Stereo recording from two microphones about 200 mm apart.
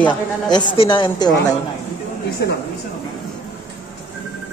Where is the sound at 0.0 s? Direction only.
20° left (ahead or behind).